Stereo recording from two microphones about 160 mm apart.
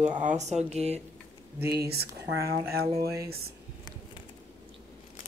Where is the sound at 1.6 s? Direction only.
85° right.